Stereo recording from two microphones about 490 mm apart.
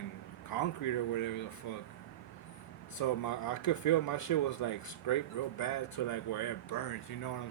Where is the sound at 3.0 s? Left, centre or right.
Left.